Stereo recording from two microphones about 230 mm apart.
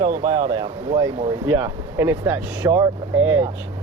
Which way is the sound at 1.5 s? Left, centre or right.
Centre.